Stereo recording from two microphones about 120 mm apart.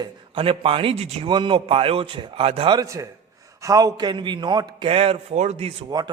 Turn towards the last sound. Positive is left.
turn(degrees=-30)  # may be behind; listen again after turning